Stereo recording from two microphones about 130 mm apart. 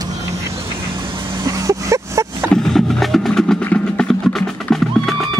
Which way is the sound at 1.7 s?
25° right (ahead or behind).